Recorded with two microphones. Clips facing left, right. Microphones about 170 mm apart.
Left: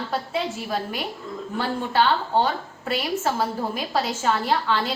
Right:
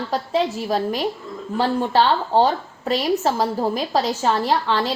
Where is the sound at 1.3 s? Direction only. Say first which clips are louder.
Right 3 dB; centre (ahead or behind).